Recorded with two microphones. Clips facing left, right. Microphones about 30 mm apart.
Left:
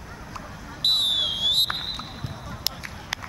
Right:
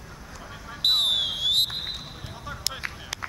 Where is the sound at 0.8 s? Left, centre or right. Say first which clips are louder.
Even; centre.